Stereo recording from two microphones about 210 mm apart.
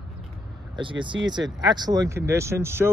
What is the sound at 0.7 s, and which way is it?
Speech, 25° right (ahead or behind).